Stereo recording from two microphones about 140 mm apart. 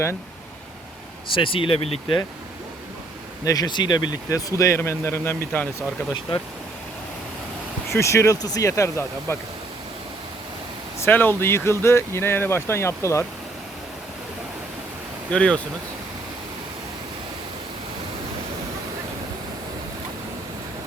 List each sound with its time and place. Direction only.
1.4 s speech: 40° left (ahead or behind)
3.4 s speech: 25° left (ahead or behind)
7.9 s speech: 20° left (ahead or behind)
11.0 s speech: 15° left (ahead or behind)
15.3 s speech: 5° left (ahead or behind)